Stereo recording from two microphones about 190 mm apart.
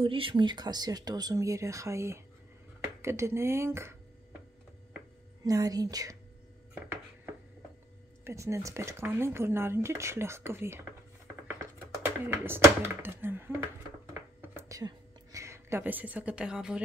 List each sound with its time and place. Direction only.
0.0 s speech: 30° right (ahead or behind)
5.4 s speech: 20° right (ahead or behind)
8.2 s speech: 15° right (ahead or behind)
12.0 s speech: 10° right (ahead or behind)
14.4 s a sound: 15° right (ahead or behind)